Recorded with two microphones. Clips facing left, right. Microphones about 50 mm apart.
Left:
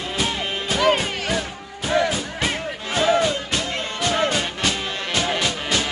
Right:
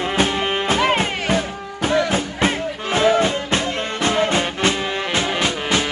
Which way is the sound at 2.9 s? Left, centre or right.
Right.